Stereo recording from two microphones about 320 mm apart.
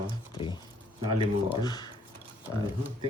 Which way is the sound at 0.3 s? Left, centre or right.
Centre.